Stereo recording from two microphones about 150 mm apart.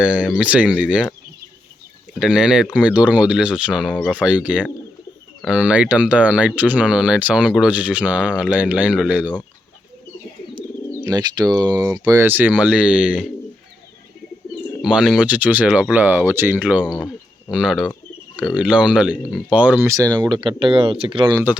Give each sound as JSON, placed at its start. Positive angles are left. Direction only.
{"t": 0.0, "sound": "speech", "side_deg": -5}
{"t": 2.1, "sound": "speech", "side_deg": -5}
{"t": 11.0, "sound": "speech", "side_deg": -25}
{"t": 14.8, "sound": "speech", "side_deg": -5}
{"t": 19.9, "sound": "speech", "side_deg": -25}